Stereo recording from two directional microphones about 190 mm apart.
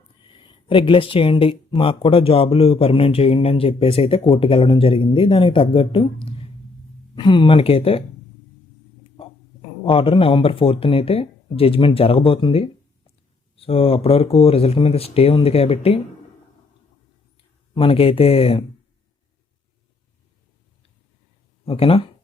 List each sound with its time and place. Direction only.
0.3 s speech: 25° left (ahead or behind)
7.2 s speech: 25° left (ahead or behind)
9.8 s speech: 30° left (ahead or behind)
17.7 s speech: 30° left (ahead or behind)
21.7 s speech: 30° left (ahead or behind)